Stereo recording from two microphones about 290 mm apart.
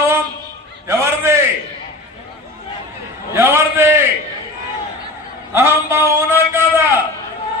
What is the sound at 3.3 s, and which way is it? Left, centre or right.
Speech, centre.